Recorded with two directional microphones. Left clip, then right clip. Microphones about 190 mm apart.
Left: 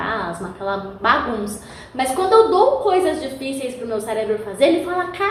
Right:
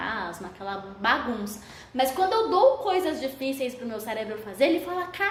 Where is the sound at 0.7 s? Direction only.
40° right (ahead or behind).